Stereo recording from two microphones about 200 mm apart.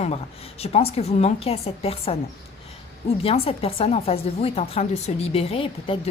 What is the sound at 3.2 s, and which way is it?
A woman's voice, 30° left (ahead or behind).